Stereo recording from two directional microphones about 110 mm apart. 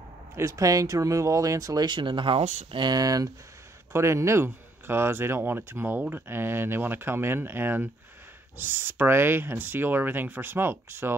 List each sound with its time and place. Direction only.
0.4 s speech: 30° right (ahead or behind)
1.9 s speech: 45° right (ahead or behind)
2.7 s speech: 40° right (ahead or behind); by 11.1 s 20° right (ahead or behind)